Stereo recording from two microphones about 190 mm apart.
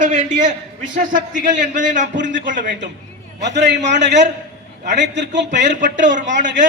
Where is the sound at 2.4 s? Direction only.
45° right (ahead or behind).